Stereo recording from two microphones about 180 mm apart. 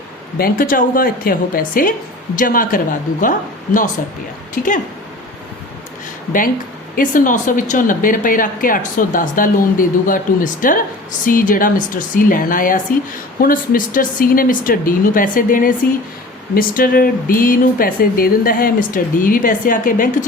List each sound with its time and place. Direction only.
0.3 s a woman's voice: 55° left (ahead or behind)
4.6 s a woman's voice: 50° left (ahead or behind)
6.9 s a woman's voice: 50° left (ahead or behind)